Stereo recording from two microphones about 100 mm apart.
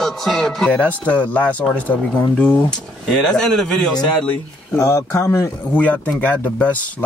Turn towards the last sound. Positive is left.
turn(degrees=15)  # may be behind; listen again after turning